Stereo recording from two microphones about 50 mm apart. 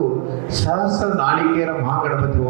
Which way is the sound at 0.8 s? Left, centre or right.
Right.